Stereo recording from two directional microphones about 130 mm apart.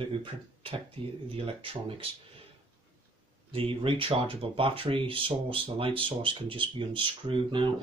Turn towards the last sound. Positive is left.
turn(degrees=-40)  # may be behind; listen again after turning